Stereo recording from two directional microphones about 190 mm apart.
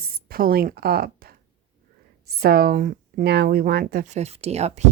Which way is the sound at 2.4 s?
50° right (ahead or behind).